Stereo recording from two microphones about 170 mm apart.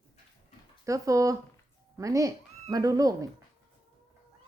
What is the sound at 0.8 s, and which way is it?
Speech, 20° right (ahead or behind).